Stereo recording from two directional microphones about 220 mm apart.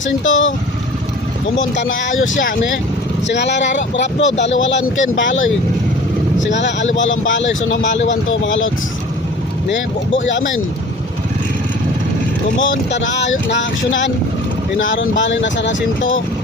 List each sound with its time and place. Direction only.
0.0 s speech: 60° left (ahead or behind)
1.5 s speech: 55° left (ahead or behind)
12.5 s speech: 60° left (ahead or behind)